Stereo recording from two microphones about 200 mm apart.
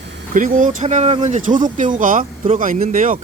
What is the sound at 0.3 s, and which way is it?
Speech, 40° right (ahead or behind).